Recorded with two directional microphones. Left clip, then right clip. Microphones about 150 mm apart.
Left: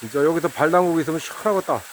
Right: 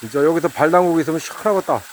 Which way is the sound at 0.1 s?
Centre (ahead or behind).